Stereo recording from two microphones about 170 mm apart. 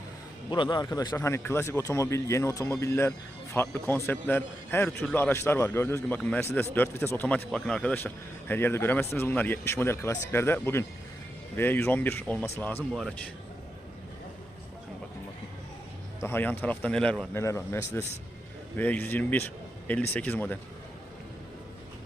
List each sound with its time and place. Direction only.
0.5 s a man's voice: 25° left (ahead or behind); by 13.1 s centre (ahead or behind)
16.2 s a man's voice: 10° left (ahead or behind)
17.4 s a man's voice: 15° left (ahead or behind)